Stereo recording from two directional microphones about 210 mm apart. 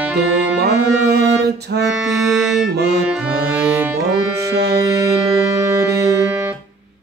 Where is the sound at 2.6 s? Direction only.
50° right (ahead or behind).